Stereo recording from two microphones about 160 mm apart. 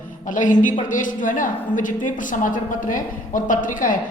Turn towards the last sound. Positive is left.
turn(degrees=55)  # may be behind; listen again after turning